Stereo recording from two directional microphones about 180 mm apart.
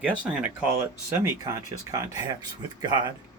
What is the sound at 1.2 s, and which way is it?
Speech, 15° right (ahead or behind).